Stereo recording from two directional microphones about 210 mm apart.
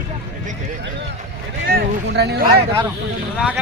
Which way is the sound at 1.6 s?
50° right (ahead or behind).